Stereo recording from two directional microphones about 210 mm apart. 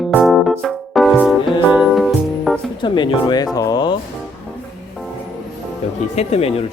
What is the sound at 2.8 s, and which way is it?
Speech, 25° left (ahead or behind).